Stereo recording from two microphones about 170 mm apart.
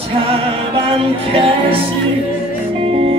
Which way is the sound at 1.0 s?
35° right (ahead or behind).